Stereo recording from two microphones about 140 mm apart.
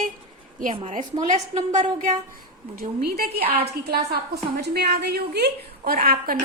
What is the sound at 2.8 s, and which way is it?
Speech, 90° right.